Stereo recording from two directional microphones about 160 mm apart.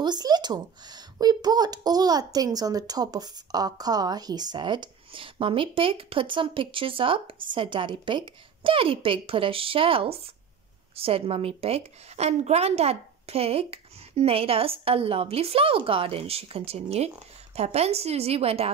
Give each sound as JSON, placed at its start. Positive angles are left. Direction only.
{"t": 0.0, "sound": "a woman's voice", "side_deg": -25}